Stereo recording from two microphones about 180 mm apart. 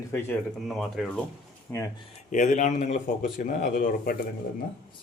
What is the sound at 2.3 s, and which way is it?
A man's voice, 45° left (ahead or behind).